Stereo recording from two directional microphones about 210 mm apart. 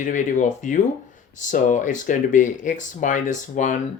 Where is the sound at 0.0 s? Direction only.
35° left (ahead or behind).